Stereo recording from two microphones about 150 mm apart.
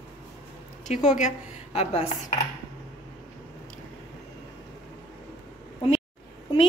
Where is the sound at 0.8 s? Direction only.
55° left (ahead or behind).